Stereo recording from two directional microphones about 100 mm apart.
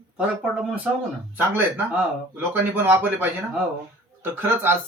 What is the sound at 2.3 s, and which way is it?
A man's voice, 20° right (ahead or behind).